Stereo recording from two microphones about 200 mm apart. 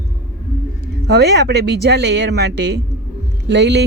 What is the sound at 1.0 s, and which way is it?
Speech, 55° right (ahead or behind).